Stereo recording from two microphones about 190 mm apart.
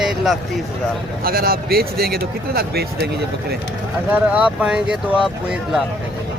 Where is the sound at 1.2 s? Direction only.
50° right (ahead or behind).